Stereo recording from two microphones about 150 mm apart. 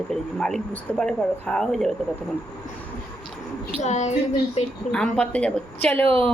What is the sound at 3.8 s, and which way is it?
Speech, 50° left (ahead or behind).